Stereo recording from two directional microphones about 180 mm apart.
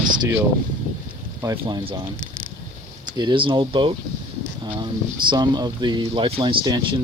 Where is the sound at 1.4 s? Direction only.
20° right (ahead or behind).